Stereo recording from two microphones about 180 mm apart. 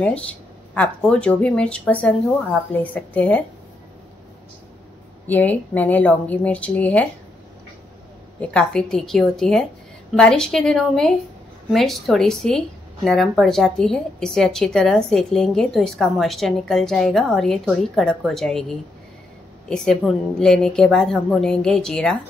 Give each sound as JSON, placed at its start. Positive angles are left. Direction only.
{"t": 0.0, "sound": "speech", "side_deg": 5}
{"t": 5.2, "sound": "speech", "side_deg": 10}
{"t": 8.4, "sound": "a woman's voice", "side_deg": 5}